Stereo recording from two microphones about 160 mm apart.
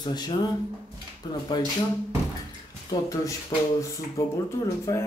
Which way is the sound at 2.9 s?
20° left (ahead or behind).